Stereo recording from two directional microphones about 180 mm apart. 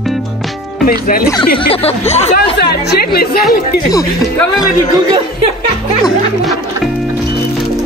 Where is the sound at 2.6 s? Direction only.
60° left (ahead or behind).